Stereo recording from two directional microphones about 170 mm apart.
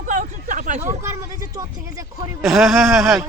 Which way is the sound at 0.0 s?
50° right (ahead or behind).